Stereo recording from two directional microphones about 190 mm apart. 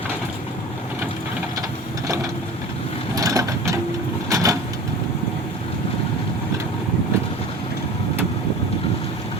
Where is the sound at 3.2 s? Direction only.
15° right (ahead or behind).